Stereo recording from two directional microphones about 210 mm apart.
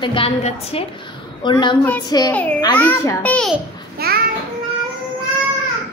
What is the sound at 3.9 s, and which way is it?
Child singing, 45° right (ahead or behind).